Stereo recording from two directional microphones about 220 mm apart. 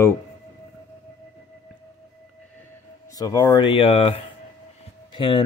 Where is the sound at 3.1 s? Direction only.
15° left (ahead or behind).